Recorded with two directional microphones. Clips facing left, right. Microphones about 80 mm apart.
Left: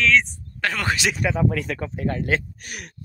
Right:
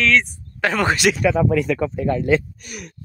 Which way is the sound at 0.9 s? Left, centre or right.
Right.